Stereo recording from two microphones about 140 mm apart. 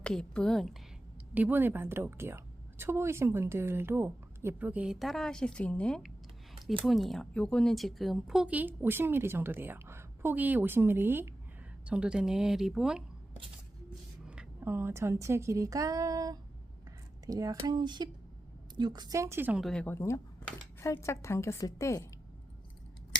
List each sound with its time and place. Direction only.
0.0 s speech: 5° left (ahead or behind)
1.3 s a woman's voice: 10° right (ahead or behind)
14.3 s a woman's voice: 10° right (ahead or behind)
19.6 s a woman's voice: 10° left (ahead or behind)